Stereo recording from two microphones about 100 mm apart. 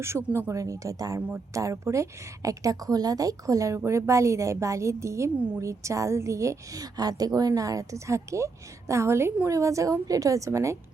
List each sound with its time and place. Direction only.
0.3 s a woman's voice: 30° right (ahead or behind)